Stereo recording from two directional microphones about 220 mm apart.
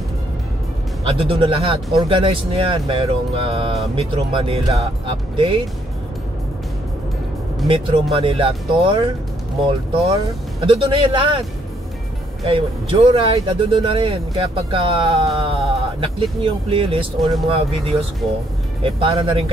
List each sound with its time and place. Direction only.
1.0 s speech: 25° right (ahead or behind)
7.6 s speech: 25° right (ahead or behind)
12.4 s speech: 25° right (ahead or behind)
18.8 s speech: 25° right (ahead or behind)